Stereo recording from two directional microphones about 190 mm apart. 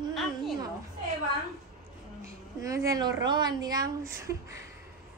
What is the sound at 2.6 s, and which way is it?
Speech, 15° right (ahead or behind).